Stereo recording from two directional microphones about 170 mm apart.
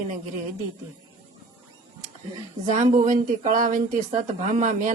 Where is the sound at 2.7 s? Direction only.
45° right (ahead or behind).